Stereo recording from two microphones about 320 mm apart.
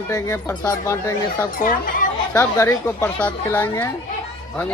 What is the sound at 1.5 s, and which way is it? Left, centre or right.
Speech, left.